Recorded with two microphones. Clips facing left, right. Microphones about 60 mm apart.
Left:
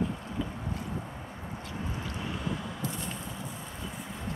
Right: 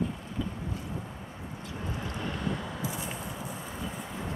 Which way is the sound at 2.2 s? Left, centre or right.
Centre.